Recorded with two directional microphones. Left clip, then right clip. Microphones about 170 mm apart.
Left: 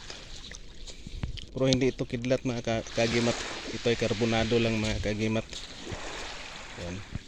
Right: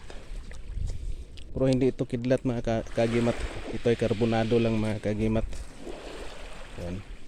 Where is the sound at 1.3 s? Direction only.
10° right (ahead or behind).